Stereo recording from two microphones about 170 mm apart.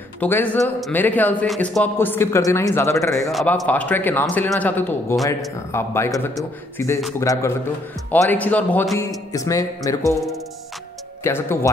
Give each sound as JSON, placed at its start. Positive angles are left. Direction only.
{"t": 0.2, "sound": "speech", "side_deg": 10}
{"t": 3.2, "sound": "speech", "side_deg": 0}
{"t": 11.2, "sound": "speech", "side_deg": 15}